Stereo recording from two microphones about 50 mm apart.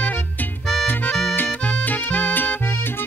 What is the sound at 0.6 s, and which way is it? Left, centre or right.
Music, centre.